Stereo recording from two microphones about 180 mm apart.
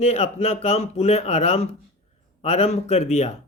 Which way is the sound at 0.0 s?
35° left (ahead or behind).